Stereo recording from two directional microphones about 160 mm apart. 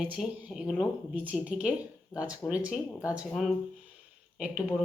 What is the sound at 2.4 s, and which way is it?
A woman's voice, 5° right (ahead or behind).